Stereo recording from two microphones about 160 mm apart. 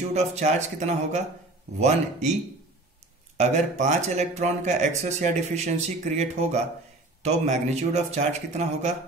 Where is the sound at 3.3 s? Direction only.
45° right (ahead or behind).